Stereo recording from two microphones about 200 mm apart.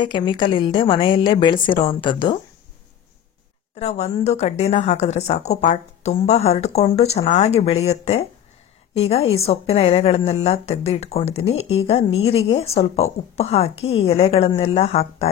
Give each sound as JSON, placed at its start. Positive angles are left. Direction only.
{"t": 0.0, "sound": "a woman's voice", "side_deg": 25}
{"t": 3.8, "sound": "a woman's voice", "side_deg": 30}